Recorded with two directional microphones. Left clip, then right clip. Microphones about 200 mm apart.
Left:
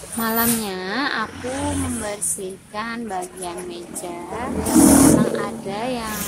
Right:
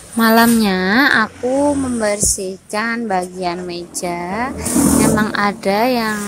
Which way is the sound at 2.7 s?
30° right (ahead or behind).